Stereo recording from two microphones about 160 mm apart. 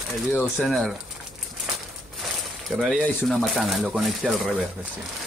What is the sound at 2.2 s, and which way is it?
Speech, centre (ahead or behind).